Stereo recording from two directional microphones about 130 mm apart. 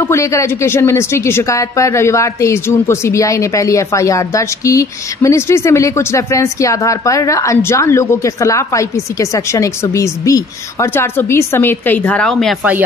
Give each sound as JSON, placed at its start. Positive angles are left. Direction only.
{"t": 0.0, "sound": "speech", "side_deg": 20}